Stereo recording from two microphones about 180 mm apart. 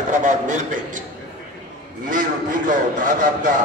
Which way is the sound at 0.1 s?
45° right (ahead or behind).